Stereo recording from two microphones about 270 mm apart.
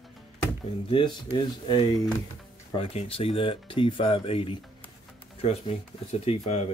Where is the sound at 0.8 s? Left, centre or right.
Centre.